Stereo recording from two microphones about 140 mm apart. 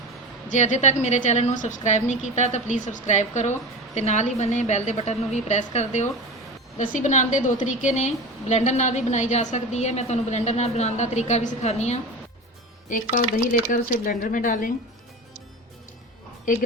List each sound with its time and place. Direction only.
0.4 s a woman's voice: 60° left (ahead or behind)
12.9 s speech: 70° left (ahead or behind)
16.5 s speech: 75° left (ahead or behind)